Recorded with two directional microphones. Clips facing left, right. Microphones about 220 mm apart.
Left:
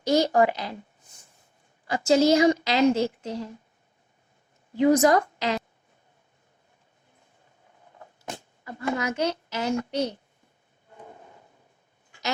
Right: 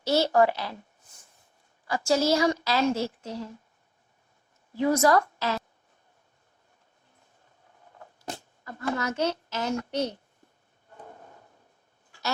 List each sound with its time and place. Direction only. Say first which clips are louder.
0.0 s a woman's voice: left 1 dB; 15° left (ahead or behind)
1.9 s a woman's voice: left 4 dB; 20° left (ahead or behind)
4.7 s a woman's voice: left 3 dB; 20° left (ahead or behind)
8.6 s a woman's voice: left 2 dB; 10° left (ahead or behind)